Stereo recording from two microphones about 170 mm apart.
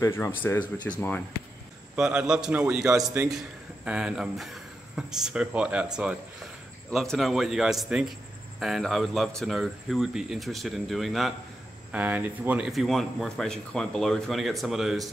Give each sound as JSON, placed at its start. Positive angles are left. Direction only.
{"t": 0.0, "sound": "speech", "side_deg": 15}
{"t": 2.0, "sound": "speech", "side_deg": -5}